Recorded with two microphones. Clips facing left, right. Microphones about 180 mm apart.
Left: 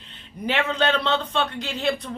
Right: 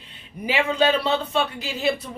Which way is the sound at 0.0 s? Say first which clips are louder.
Left 1 dB; 10° right (ahead or behind).